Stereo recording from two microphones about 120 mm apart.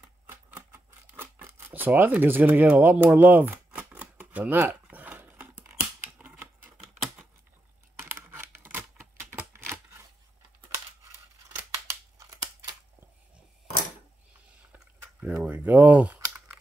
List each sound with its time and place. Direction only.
0.3 s scissors: 15° right (ahead or behind)
8.0 s computer keyboard: 20° right (ahead or behind)
9.5 s typewriter: 25° right (ahead or behind)
11.7 s scissors: 25° right (ahead or behind)
15.1 s a sound: 10° right (ahead or behind)